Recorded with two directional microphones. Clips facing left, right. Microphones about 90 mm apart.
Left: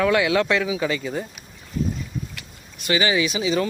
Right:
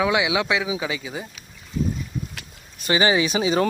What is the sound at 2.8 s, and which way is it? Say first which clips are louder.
Speech: right 1 dB; 30° right (ahead or behind).